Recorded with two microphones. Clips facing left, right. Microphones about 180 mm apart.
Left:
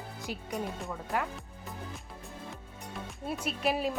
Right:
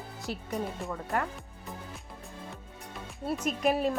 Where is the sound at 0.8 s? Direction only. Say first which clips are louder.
Right 2 dB; 5° left (ahead or behind).